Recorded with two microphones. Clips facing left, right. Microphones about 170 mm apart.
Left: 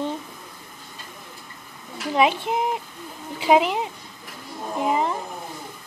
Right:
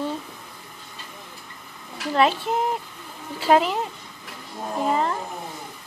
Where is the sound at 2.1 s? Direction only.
15° left (ahead or behind).